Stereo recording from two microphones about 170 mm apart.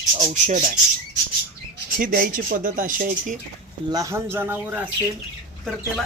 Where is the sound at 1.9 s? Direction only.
55° right (ahead or behind).